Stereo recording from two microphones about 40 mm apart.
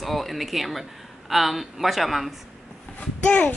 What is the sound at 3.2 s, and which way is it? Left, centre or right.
Speech, left.